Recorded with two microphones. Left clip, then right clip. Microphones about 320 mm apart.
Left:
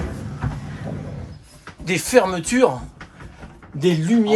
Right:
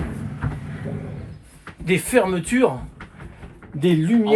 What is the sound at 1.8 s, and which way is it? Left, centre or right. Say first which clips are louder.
Speech: left 2 dB; centre.